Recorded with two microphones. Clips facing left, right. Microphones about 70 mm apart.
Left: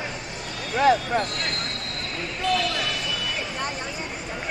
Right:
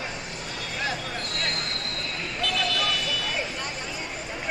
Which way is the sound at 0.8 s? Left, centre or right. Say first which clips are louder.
Left 13 dB; left.